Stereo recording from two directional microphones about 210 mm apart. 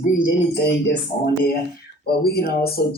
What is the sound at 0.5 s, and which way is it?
Speech, 50° left (ahead or behind).